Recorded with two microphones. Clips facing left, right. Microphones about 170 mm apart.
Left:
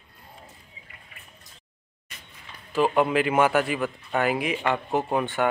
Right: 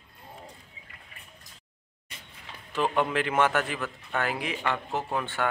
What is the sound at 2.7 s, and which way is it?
Speech, 10° left (ahead or behind).